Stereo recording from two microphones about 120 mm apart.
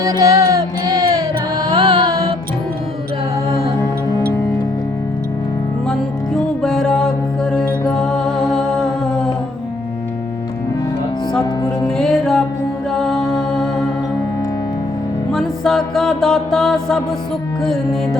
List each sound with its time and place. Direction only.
0.0 s music: 25° right (ahead or behind)
1.7 s music: 50° right (ahead or behind)
5.9 s music: 5° left (ahead or behind)
11.9 s music: 5° left (ahead or behind)
15.3 s music: centre (ahead or behind)